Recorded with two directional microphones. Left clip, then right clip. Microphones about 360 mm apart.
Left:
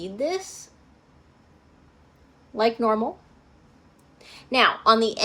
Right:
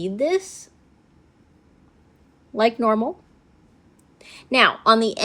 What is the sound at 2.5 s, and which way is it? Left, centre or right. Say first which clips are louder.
Speech: right 3 dB; right.